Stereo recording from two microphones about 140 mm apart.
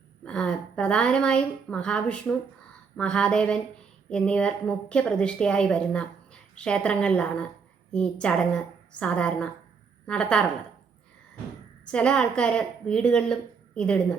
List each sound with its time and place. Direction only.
0.3 s a woman's voice: 5° left (ahead or behind)
11.9 s a woman's voice: 5° left (ahead or behind)